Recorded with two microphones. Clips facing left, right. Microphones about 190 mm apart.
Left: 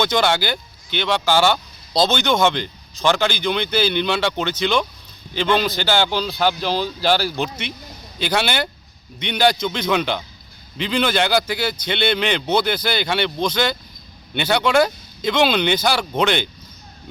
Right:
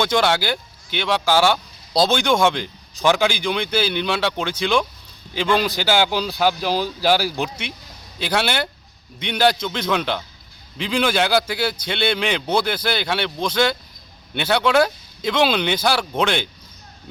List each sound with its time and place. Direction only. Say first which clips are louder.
0.0 s speech: even; centre (ahead or behind)